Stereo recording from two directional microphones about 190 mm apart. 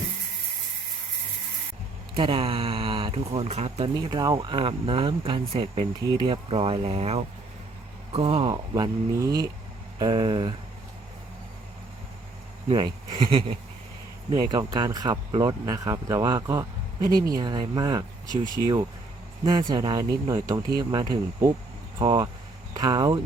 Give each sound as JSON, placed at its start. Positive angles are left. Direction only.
{"t": 2.1, "sound": "speech", "side_deg": -30}
{"t": 3.9, "sound": "speech", "side_deg": -20}
{"t": 12.6, "sound": "speech", "side_deg": -25}
{"t": 19.5, "sound": "speech", "side_deg": -20}